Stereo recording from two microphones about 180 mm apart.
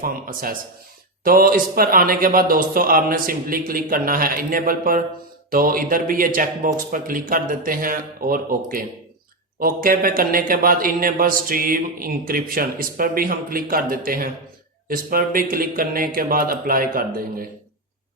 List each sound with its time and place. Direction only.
0.0 s speech: 50° right (ahead or behind)